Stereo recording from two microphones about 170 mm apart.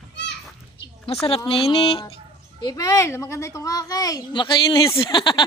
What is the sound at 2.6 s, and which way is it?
A child's voice, 20° left (ahead or behind).